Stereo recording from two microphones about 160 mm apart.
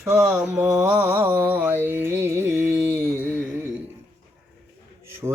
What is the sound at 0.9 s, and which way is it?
Speech, 10° right (ahead or behind).